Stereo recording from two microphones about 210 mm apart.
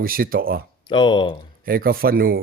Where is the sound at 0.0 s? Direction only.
45° right (ahead or behind).